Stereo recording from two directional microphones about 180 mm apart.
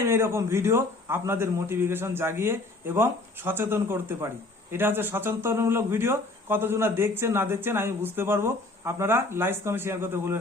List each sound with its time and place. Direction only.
0.1 s speech: 15° right (ahead or behind)